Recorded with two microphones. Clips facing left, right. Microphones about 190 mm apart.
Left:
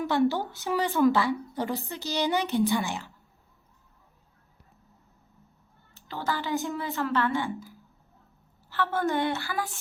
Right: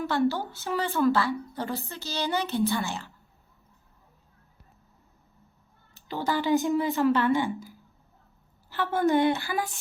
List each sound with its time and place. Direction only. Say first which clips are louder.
0.0 s a woman's voice: left 1 dB; 15° left (ahead or behind)
5.9 s a woman's voice: right 3 dB; 15° right (ahead or behind)
8.7 s a woman's voice: right 3 dB; 15° right (ahead or behind)